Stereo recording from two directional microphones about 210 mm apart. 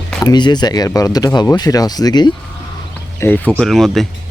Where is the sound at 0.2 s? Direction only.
20° left (ahead or behind).